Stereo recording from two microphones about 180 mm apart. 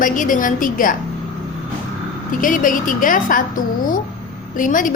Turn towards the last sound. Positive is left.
turn(degrees=45)  # may be behind; listen again after turning